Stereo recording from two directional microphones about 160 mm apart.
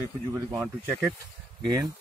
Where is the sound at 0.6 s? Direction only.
10° right (ahead or behind).